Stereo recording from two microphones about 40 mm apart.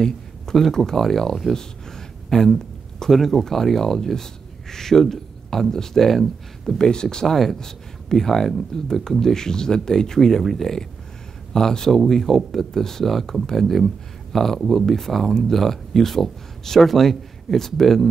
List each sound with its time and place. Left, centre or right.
0.0 s speech: centre
6.8 s speech: centre
7.2 s speech: centre